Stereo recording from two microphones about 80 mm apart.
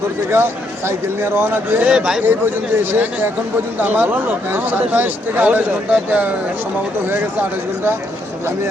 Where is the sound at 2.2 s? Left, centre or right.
Right.